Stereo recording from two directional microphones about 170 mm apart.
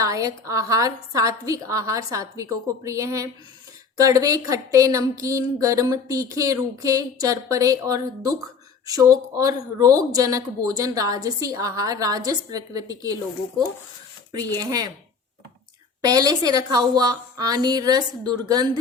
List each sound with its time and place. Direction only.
0.0 s speech: 20° right (ahead or behind)
14.3 s speech: 20° right (ahead or behind)
16.0 s speech: 20° right (ahead or behind)